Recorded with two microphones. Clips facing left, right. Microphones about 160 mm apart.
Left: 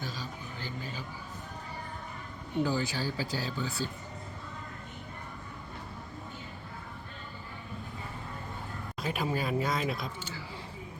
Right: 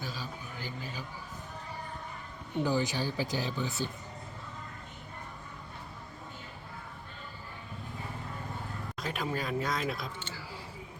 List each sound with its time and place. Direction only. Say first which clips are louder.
0.0 s a sound: left 1 dB; 10° right (ahead or behind)
2.6 s speech: right 1 dB; 15° right (ahead or behind)
9.0 s speech: left 3 dB; 5° left (ahead or behind)